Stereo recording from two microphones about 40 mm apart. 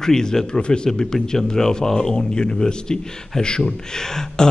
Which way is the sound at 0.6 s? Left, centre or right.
Left.